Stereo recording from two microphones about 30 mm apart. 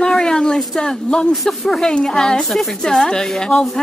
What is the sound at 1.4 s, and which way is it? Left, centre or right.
Speech, centre.